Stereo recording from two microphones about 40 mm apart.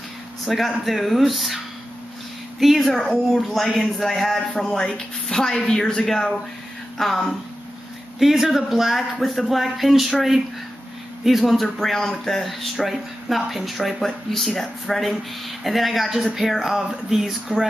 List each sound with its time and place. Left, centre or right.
0.5 s speech: centre
2.6 s speech: centre
4.7 s a woman's voice: centre
6.0 s speech: centre
8.2 s speech: centre
11.2 s speech: centre
14.0 s speech: centre